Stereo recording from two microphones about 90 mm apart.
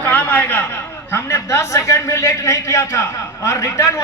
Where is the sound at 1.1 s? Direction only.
35° left (ahead or behind).